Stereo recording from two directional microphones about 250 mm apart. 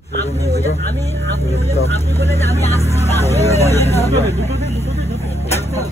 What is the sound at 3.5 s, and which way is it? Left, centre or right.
Vehicle, centre.